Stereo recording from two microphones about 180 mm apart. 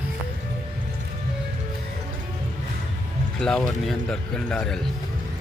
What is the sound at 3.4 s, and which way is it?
Speech, 5° left (ahead or behind).